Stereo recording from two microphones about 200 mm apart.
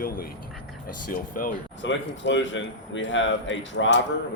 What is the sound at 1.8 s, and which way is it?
Speech, 65° left (ahead or behind).